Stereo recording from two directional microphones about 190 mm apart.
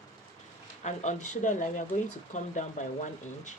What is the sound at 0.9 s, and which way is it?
Speech, 40° left (ahead or behind).